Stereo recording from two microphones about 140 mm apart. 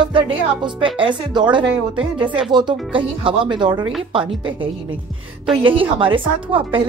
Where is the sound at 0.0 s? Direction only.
35° right (ahead or behind).